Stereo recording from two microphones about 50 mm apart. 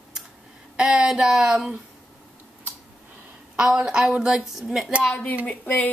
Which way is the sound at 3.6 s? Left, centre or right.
Centre.